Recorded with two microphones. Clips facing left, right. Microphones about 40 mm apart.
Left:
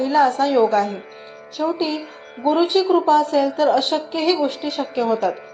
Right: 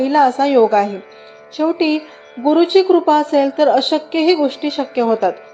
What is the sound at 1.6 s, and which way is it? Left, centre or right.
Speech, right.